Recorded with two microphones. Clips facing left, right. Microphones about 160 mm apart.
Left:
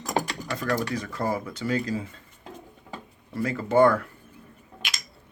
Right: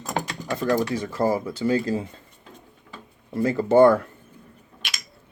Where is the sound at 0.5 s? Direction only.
25° right (ahead or behind).